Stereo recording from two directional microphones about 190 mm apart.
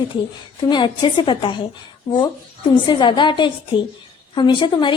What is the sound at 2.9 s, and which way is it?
A woman's voice, 25° left (ahead or behind).